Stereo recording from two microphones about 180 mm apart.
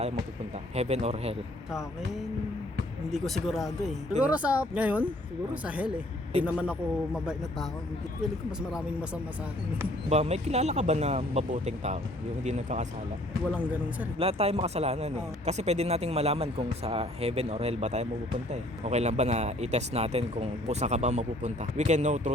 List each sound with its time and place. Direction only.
0.8 s speech: 40° right (ahead or behind)
3.1 s speech: centre (ahead or behind)
10.1 s speech: 35° right (ahead or behind)
13.5 s speech: 10° right (ahead or behind)
14.2 s speech: 35° right (ahead or behind)